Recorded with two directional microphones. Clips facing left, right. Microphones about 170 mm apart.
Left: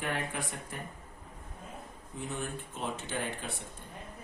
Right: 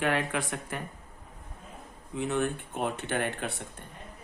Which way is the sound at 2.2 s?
70° right (ahead or behind).